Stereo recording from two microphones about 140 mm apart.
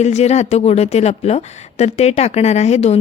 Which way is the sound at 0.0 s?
50° left (ahead or behind).